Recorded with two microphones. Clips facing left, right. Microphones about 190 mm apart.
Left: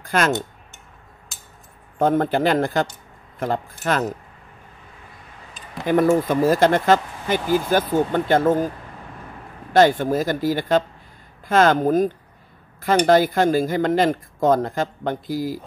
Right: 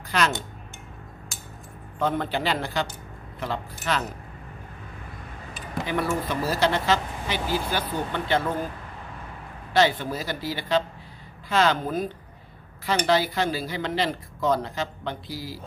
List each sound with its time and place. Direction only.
0.0 s speech: 50° left (ahead or behind)
2.0 s speech: 45° left (ahead or behind)
5.9 s speech: 45° left (ahead or behind)
9.7 s speech: 50° left (ahead or behind)